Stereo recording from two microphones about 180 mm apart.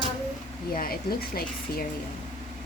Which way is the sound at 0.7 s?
50° left (ahead or behind).